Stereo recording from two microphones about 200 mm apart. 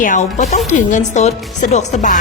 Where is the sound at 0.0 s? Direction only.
40° left (ahead or behind).